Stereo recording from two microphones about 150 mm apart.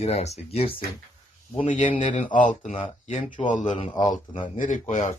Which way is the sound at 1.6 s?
55° left (ahead or behind).